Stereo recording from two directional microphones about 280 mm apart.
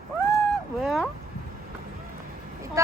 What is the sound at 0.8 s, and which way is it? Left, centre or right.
Speech, centre.